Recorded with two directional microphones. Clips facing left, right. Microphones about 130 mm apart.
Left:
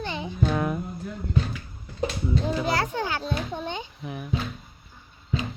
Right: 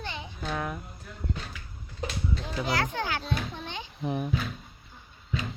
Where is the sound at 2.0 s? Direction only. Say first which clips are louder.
Left 7 dB; 30° left (ahead or behind).